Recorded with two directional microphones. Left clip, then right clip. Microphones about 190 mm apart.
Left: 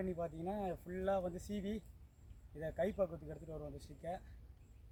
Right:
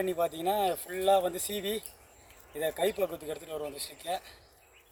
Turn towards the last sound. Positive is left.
turn(degrees=10)  # may be behind; listen again after turning